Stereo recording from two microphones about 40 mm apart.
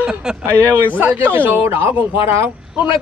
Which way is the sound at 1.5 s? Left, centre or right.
Right.